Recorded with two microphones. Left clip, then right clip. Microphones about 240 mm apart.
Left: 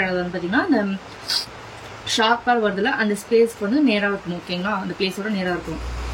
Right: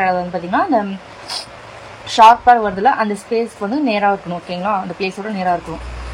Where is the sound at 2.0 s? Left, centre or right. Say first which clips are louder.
Right 10 dB; centre.